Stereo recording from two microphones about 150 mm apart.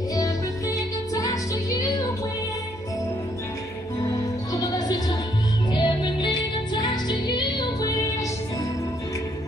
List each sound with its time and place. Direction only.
0.1 s music: 25° left (ahead or behind)
4.0 s music: 25° left (ahead or behind)